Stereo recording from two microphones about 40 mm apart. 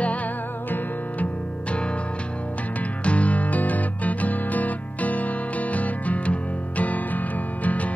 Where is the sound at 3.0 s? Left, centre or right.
Left.